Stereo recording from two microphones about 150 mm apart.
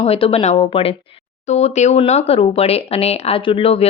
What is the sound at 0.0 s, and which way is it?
Speech, 40° left (ahead or behind).